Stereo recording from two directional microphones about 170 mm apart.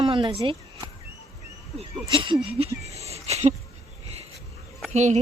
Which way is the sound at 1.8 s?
30° right (ahead or behind).